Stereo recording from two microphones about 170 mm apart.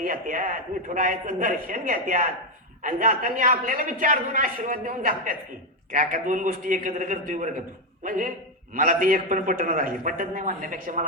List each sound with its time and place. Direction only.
0.0 s a man's voice: 55° right (ahead or behind)